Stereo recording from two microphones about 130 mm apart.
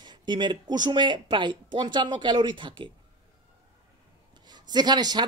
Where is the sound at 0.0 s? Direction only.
35° right (ahead or behind).